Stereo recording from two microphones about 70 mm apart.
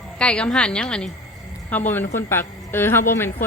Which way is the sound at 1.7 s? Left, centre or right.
Left.